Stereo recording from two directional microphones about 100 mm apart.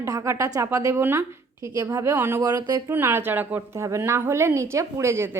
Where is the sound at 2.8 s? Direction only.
25° right (ahead or behind).